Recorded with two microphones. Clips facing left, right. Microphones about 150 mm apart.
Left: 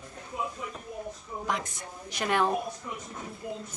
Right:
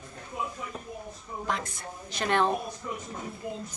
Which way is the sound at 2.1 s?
10° left (ahead or behind).